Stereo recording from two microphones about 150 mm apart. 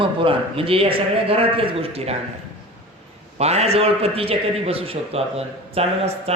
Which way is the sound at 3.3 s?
45° right (ahead or behind).